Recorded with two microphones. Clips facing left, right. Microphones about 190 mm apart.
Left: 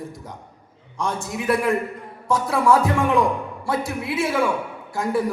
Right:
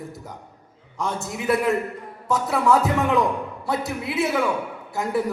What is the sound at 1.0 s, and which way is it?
A man's voice, 25° right (ahead or behind).